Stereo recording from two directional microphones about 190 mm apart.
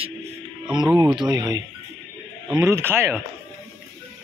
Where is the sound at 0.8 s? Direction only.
5° right (ahead or behind).